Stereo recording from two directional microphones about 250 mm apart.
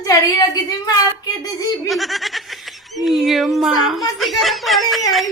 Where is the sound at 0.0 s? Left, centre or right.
Centre.